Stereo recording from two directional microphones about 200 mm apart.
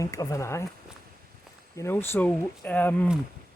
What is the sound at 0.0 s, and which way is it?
Speech, 15° left (ahead or behind).